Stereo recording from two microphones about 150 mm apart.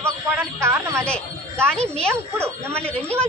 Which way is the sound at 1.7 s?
45° right (ahead or behind).